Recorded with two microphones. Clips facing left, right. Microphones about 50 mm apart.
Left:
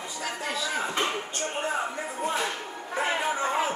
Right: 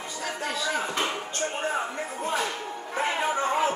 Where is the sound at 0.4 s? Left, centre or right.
Centre.